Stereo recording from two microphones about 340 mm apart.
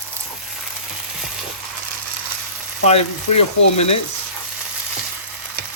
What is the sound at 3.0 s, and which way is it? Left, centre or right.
Speech, left.